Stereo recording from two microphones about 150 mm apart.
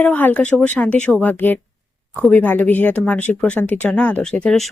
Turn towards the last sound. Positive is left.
turn(degrees=5)  # may be behind; listen again after turning